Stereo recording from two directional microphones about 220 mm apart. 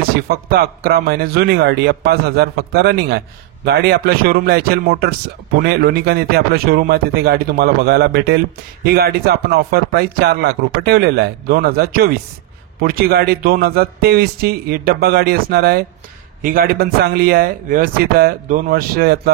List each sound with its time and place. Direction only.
0.1 s speech: 45° right (ahead or behind)